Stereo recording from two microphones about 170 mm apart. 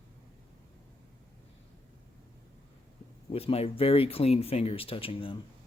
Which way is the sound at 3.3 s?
35° left (ahead or behind).